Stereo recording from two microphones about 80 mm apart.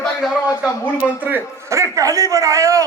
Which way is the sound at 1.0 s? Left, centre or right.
Centre.